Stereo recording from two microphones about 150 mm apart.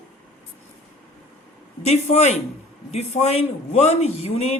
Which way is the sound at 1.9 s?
45° left (ahead or behind).